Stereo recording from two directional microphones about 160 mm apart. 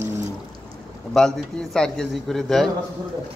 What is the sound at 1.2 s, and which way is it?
A man's voice, 5° left (ahead or behind).